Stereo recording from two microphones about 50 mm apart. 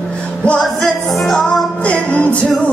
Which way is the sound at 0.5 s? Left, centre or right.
Centre.